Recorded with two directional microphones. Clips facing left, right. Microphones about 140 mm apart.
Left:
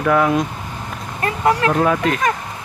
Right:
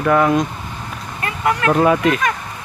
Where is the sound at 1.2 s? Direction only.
30° left (ahead or behind).